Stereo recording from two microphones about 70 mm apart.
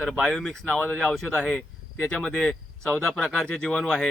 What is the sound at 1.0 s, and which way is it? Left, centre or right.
Speech, centre.